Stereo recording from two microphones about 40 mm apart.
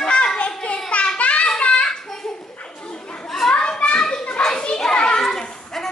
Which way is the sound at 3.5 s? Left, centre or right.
Left.